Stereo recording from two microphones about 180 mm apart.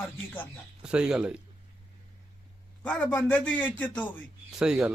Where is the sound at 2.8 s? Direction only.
5° left (ahead or behind).